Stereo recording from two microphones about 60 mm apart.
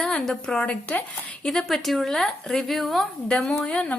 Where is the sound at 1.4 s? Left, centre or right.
Centre.